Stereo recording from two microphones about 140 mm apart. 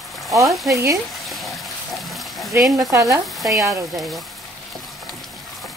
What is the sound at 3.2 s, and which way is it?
Frying, centre (ahead or behind).